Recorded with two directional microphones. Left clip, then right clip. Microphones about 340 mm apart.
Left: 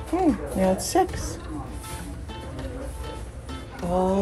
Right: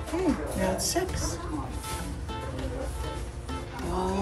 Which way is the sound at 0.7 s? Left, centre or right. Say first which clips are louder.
Left 6 dB; centre.